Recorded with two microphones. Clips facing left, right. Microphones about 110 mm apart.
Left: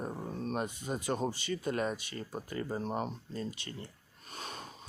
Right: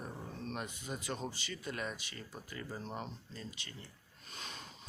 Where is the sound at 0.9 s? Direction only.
45° left (ahead or behind).